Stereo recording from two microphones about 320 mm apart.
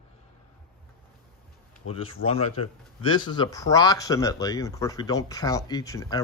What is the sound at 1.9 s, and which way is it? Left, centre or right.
Speech, centre.